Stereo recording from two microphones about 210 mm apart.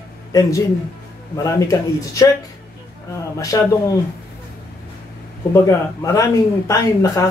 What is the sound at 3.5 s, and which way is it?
Speech, 15° left (ahead or behind).